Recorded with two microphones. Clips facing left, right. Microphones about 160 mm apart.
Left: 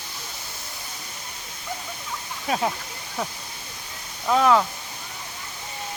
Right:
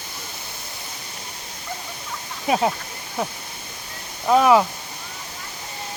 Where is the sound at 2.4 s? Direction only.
20° right (ahead or behind).